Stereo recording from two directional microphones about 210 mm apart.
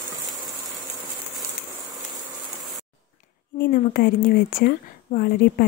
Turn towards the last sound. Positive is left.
turn(degrees=45)  # may be behind; listen again after turning